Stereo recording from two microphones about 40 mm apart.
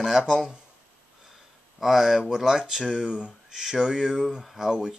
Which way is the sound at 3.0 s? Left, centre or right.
Right.